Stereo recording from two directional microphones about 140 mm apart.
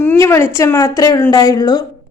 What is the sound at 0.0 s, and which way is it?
A woman's voice, 15° left (ahead or behind).